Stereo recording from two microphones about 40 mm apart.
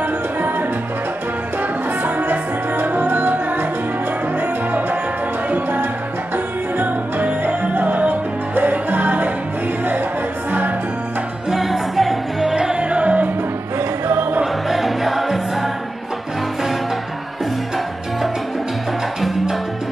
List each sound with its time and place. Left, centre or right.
0.0 s music: right
11.5 s music: centre
12.5 s music: right
13.7 s music: right
14.4 s music: centre